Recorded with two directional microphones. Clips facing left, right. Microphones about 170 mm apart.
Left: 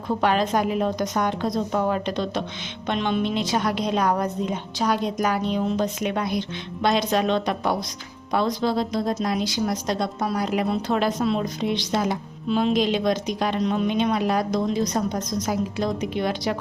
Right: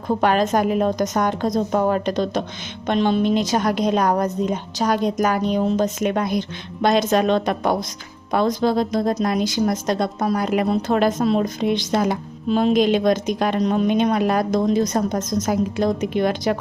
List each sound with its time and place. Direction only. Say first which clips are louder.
0.1 s a woman's voice: right 3 dB; 45° right (ahead or behind)